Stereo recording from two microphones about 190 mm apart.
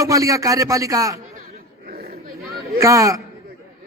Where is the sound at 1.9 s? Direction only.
50° right (ahead or behind).